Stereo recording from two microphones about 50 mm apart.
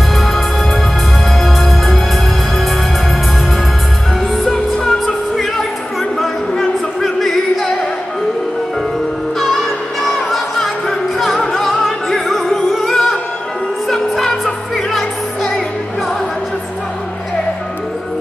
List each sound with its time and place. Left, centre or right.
1.4 s music: centre
4.5 s music: centre
7.0 s music: centre
10.0 s music: centre